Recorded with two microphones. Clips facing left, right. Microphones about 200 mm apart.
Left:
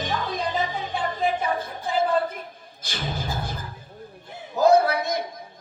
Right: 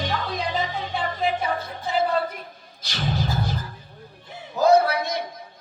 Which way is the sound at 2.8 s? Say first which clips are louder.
Right 4 dB; 50° left (ahead or behind).